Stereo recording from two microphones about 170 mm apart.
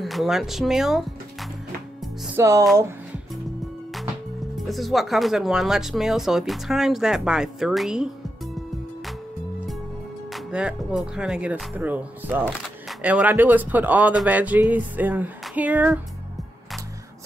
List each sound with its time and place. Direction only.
0.0 s speech: centre (ahead or behind)
2.3 s speech: 15° right (ahead or behind)
4.6 s speech: centre (ahead or behind)
10.3 s speech: 5° right (ahead or behind)
15.4 s music: 10° right (ahead or behind)